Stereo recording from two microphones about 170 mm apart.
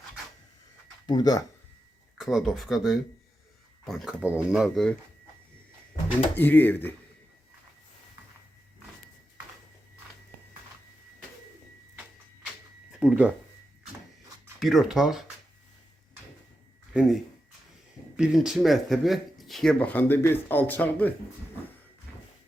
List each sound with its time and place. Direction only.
1.0 s speech: 25° left (ahead or behind)
2.1 s speech: centre (ahead or behind)
6.3 s speech: 10° left (ahead or behind)
12.9 s a sound: 5° right (ahead or behind)
14.6 s speech: centre (ahead or behind)
16.9 s speech: 5° right (ahead or behind)
18.2 s speech: centre (ahead or behind)